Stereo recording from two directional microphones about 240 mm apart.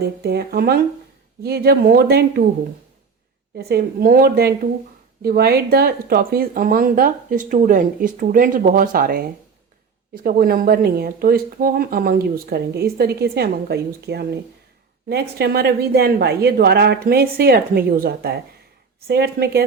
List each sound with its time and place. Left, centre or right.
0.2 s speech: right
3.6 s speech: right
10.2 s speech: right